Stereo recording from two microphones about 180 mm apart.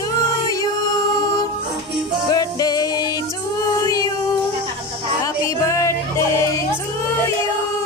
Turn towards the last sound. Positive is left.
turn(degrees=15)  # may be behind; listen again after turning